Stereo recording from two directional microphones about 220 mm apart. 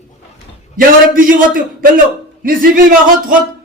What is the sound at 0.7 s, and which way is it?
Speech, 40° right (ahead or behind).